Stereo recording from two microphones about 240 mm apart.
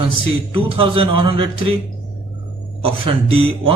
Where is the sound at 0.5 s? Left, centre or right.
Right.